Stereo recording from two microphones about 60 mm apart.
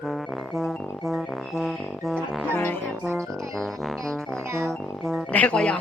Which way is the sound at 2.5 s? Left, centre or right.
Left.